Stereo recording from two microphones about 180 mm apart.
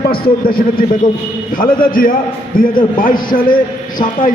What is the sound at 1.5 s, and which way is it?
A man's voice, 50° left (ahead or behind).